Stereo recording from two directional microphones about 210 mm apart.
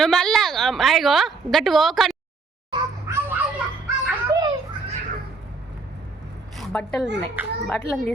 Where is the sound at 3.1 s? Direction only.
15° right (ahead or behind).